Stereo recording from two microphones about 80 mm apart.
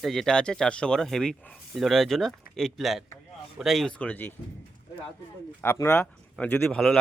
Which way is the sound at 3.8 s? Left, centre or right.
Centre.